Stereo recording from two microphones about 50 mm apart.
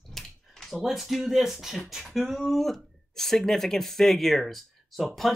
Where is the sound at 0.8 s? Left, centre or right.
Centre.